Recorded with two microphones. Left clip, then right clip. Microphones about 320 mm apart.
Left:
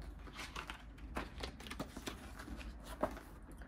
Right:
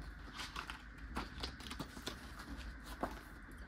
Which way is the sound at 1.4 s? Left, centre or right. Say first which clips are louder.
Even; centre.